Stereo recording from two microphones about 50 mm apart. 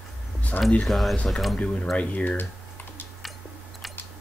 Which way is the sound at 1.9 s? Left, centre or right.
Left.